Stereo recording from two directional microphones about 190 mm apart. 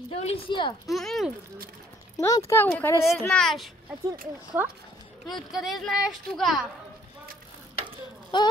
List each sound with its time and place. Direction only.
0.1 s speech: 30° left (ahead or behind)
0.8 s speech: centre (ahead or behind)
2.1 s speech: 15° left (ahead or behind)
3.1 s speech: centre (ahead or behind)
4.6 s speech: 10° right (ahead or behind)
8.3 s a sound: 25° left (ahead or behind)